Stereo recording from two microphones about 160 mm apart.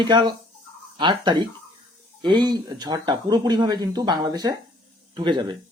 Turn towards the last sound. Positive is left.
turn(degrees=-30)  # may be behind; listen again after turning